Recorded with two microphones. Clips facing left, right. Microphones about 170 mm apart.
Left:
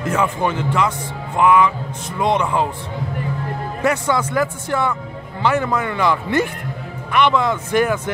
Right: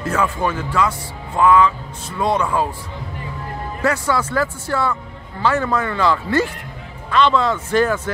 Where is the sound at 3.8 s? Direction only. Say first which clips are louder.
Left 1 dB; 20° left (ahead or behind).